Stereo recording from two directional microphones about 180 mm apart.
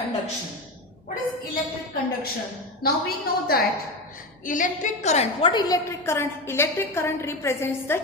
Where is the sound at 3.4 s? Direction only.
60° left (ahead or behind).